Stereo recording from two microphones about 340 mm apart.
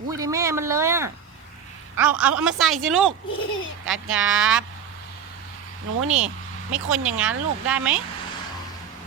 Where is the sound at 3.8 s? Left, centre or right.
Right.